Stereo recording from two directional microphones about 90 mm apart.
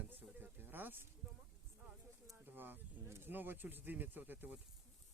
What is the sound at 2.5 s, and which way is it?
Speech, 20° right (ahead or behind).